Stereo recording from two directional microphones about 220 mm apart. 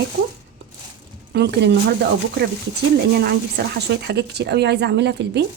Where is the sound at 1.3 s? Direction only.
50° right (ahead or behind).